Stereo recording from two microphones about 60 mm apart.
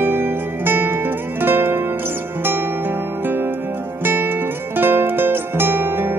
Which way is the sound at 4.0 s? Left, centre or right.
Right.